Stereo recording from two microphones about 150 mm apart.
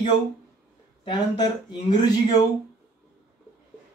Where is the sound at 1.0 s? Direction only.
30° left (ahead or behind).